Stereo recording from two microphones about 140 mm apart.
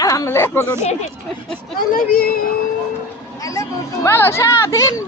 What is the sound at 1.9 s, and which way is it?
Speech, 85° left.